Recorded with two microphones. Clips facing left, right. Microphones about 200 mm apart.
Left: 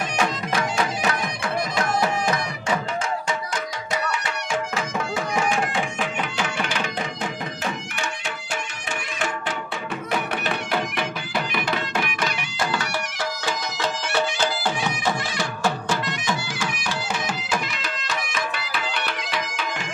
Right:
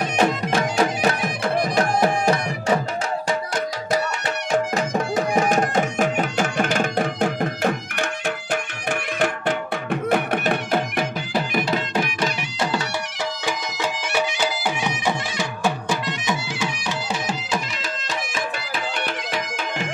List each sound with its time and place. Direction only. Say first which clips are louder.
0.2 s music: right 5 dB; 35° right (ahead or behind)
4.5 s music: right 6 dB; 40° right (ahead or behind)
13.5 s music: even; 10° right (ahead or behind)
19.3 s music: right 1 dB; 50° right (ahead or behind)